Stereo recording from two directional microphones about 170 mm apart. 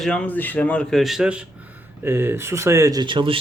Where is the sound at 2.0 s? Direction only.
15° right (ahead or behind).